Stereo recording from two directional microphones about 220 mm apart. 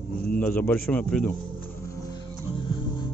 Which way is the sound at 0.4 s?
5° left (ahead or behind).